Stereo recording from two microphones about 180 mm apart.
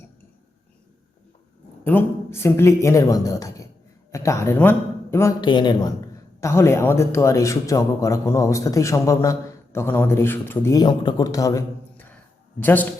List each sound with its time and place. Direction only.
1.8 s a man's voice: 10° left (ahead or behind)
5.4 s a man's voice: 25° left (ahead or behind)
6.4 s speech: 15° left (ahead or behind)